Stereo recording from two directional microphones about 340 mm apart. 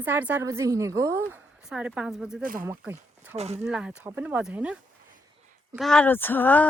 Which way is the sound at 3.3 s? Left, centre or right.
Centre.